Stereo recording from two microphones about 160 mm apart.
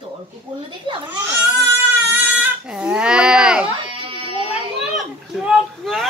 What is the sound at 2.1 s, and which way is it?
Goat, 10° right (ahead or behind).